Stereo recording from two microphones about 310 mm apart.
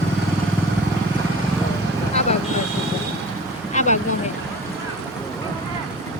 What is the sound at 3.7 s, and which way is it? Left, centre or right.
Vehicle, left.